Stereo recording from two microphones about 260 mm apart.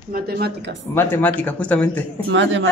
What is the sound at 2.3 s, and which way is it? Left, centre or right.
Speech, right.